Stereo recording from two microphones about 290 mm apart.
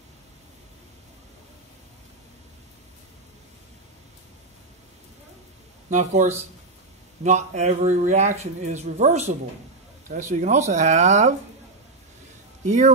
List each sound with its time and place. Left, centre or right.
5.9 s speech: right
12.6 s speech: right